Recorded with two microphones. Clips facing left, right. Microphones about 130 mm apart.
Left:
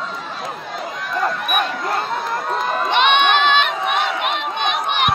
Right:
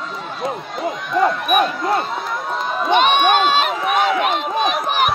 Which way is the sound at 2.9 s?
40° right (ahead or behind).